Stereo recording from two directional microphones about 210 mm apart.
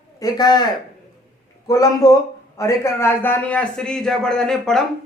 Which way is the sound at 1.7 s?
15° left (ahead or behind).